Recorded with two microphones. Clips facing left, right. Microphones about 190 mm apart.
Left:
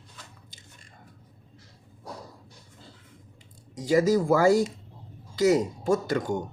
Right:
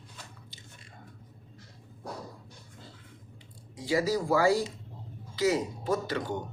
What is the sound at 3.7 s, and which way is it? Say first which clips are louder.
Speech: left 6 dB; 45° left (ahead or behind).